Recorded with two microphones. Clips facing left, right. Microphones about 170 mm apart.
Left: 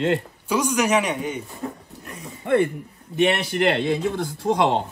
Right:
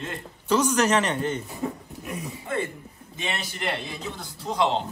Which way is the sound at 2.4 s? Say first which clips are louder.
Left 12 dB; 65° left (ahead or behind).